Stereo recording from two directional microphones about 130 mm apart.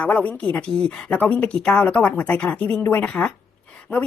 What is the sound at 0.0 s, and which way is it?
Speech, 10° left (ahead or behind).